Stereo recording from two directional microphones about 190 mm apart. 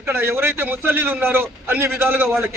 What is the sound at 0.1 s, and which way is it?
A man's voice, 10° right (ahead or behind).